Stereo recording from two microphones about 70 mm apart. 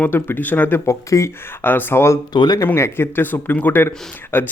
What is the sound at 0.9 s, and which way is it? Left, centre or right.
Speech, left.